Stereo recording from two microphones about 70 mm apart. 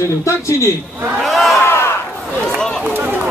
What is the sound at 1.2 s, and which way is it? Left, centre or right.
Crowd, centre.